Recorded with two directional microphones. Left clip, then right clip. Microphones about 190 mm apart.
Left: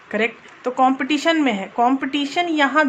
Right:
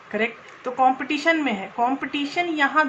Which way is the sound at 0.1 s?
50° left (ahead or behind).